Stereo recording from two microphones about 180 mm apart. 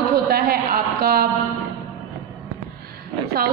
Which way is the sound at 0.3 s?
60° right (ahead or behind).